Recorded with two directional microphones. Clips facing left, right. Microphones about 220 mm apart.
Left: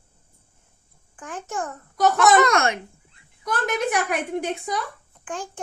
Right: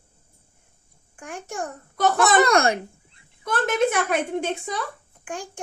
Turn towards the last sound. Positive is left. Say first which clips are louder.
# left 1 dB
turn(degrees=-15)  # may be behind; listen again after turning